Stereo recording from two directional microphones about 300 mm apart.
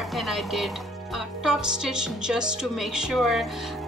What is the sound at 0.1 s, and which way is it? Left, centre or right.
Music, centre.